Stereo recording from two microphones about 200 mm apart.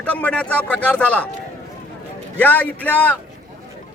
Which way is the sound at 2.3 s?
10° left (ahead or behind).